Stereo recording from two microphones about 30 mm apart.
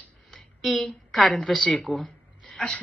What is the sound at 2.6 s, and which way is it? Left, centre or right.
Speech, centre.